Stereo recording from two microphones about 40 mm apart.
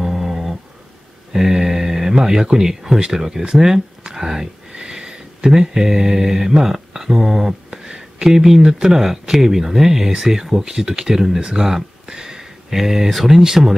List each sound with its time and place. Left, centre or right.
0.0 s dog: centre
1.3 s mantra: centre
2.1 s speech: centre